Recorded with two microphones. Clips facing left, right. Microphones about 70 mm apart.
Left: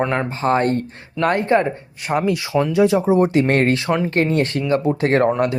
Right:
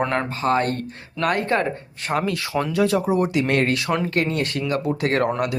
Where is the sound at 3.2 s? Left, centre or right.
Left.